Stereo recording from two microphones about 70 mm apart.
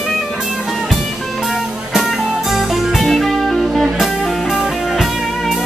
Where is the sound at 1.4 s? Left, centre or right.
Centre.